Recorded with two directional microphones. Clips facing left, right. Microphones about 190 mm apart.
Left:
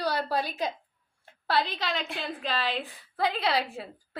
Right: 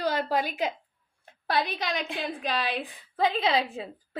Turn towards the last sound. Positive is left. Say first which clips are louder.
# right 2 dB
turn(degrees=-20)  # may be behind; listen again after turning